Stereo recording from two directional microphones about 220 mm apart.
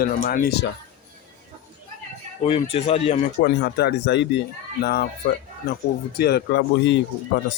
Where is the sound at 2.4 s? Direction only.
25° left (ahead or behind).